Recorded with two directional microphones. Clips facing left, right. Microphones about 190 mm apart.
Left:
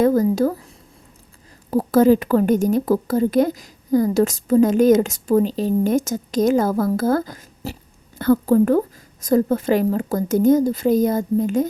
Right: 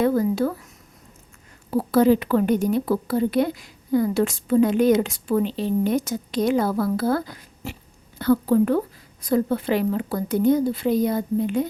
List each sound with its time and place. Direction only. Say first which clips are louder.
0.0 s speech: left 4 dB; 40° left (ahead or behind)
1.7 s a woman's voice: left 3 dB; 45° left (ahead or behind)